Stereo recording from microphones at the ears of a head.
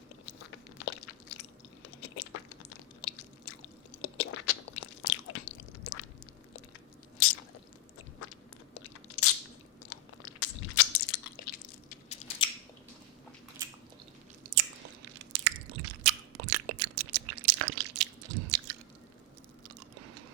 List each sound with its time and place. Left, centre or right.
0.3 s biting: left
2.0 s chewing: left
8.7 s crunch: left
9.9 s biting: left
14.5 s biting: right
19.6 s chewing: right